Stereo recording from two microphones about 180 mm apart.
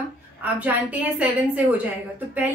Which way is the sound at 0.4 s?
10° right (ahead or behind).